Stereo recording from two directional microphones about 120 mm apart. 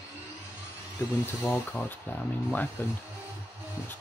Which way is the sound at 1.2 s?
20° left (ahead or behind).